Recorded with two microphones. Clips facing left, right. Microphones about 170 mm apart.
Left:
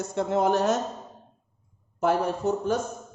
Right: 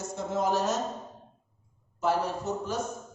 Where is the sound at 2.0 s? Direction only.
55° left (ahead or behind).